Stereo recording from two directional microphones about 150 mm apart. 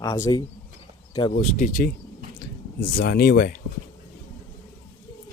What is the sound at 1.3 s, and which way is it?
Speech, 55° left (ahead or behind).